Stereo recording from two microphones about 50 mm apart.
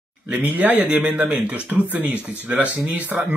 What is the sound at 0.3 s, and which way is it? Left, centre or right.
Speech, right.